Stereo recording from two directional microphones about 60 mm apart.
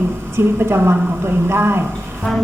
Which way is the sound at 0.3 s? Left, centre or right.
Right.